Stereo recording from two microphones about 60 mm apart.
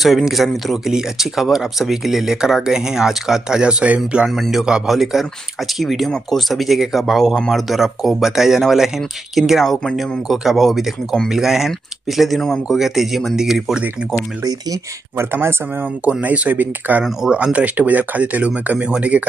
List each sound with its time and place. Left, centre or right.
0.0 s speech: centre
4.3 s speech: centre
7.7 s speech: centre
15.1 s speech: right
16.1 s speech: right
17.0 s speech: centre